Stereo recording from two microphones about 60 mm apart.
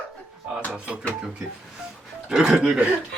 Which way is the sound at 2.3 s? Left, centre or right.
Centre.